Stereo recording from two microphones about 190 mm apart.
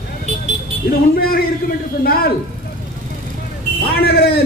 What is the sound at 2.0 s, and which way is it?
Speech, 50° left (ahead or behind).